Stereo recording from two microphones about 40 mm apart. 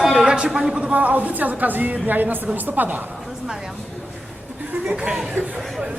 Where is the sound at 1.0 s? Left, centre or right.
Right.